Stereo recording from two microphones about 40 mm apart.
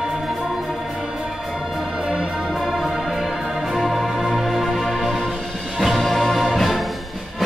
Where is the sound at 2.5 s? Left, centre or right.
Centre.